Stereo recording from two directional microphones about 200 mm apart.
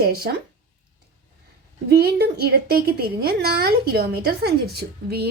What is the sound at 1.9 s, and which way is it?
A woman's voice, 50° right (ahead or behind).